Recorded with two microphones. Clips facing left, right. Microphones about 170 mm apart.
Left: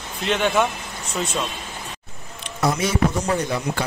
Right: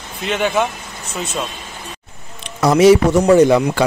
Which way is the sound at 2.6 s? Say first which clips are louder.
Right 11 dB; 80° right.